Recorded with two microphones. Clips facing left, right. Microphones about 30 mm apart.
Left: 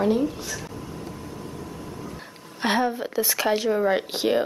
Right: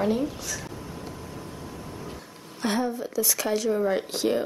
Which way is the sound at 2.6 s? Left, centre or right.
Left.